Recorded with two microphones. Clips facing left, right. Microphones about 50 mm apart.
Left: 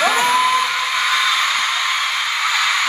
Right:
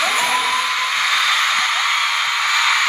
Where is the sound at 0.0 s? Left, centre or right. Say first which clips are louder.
Left 3 dB; left.